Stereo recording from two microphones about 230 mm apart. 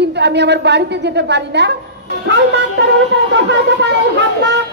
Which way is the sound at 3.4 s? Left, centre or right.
Right.